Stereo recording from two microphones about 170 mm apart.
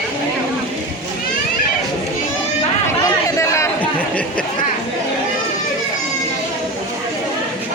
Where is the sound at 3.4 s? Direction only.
15° left (ahead or behind).